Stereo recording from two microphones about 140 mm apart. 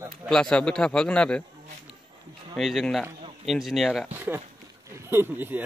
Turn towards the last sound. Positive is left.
turn(degrees=-15)  # may be behind; listen again after turning